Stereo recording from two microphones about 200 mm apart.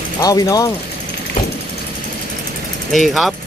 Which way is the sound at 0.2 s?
15° left (ahead or behind).